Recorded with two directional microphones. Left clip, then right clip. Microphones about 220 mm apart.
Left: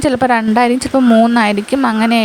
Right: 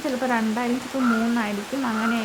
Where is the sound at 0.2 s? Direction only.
45° left (ahead or behind).